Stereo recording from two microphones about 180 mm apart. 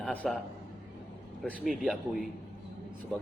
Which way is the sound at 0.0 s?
5° left (ahead or behind).